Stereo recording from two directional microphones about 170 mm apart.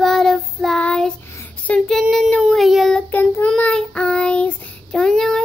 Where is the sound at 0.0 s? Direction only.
Centre (ahead or behind).